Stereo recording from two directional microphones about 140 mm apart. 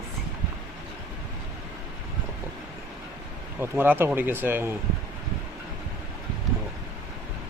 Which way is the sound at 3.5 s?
15° right (ahead or behind).